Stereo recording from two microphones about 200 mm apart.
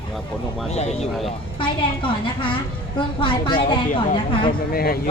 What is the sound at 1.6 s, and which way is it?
A woman's voice, 25° left (ahead or behind).